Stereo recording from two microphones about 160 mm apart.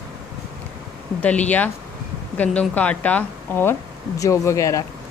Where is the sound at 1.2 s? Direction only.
10° left (ahead or behind).